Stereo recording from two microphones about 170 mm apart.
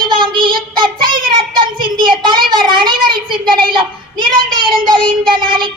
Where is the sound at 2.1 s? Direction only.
30° right (ahead or behind).